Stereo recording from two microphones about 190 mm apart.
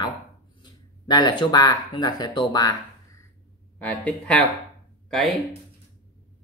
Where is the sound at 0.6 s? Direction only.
25° left (ahead or behind).